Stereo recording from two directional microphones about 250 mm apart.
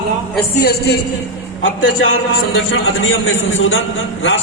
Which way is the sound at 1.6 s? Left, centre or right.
Left.